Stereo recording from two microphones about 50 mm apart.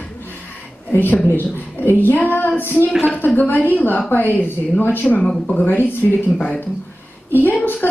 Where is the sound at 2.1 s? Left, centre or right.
Left.